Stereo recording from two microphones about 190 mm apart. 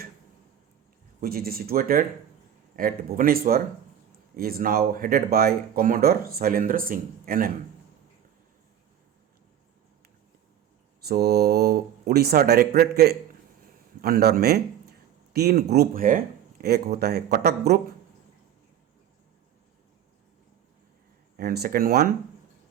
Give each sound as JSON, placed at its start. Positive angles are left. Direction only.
{"t": 1.2, "sound": "speech", "side_deg": -50}
{"t": 11.1, "sound": "speech", "side_deg": -55}
{"t": 14.0, "sound": "a man's voice", "side_deg": -55}
{"t": 21.3, "sound": "speech", "side_deg": -55}